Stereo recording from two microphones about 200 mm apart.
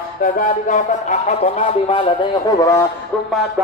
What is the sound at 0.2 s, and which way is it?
Music, 40° left (ahead or behind).